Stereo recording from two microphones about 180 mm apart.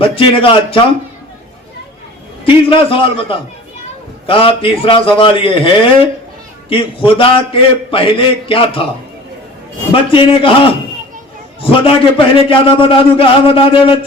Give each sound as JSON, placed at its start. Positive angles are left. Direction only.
{"t": 0.2, "sound": "a man's voice", "side_deg": 30}
{"t": 2.4, "sound": "a man's voice", "side_deg": 30}
{"t": 9.9, "sound": "a man's voice", "side_deg": 30}
{"t": 11.6, "sound": "a man's voice", "side_deg": 30}